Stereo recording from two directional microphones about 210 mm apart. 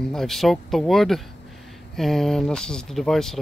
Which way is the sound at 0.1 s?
Centre (ahead or behind).